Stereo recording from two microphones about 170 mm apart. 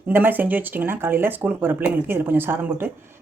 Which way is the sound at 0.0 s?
10° right (ahead or behind).